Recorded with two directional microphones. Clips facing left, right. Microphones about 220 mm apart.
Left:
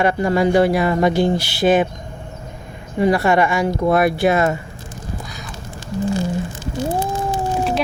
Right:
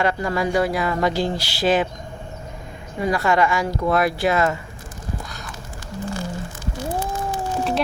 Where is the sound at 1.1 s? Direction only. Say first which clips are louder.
Left 6 dB; 55° left (ahead or behind).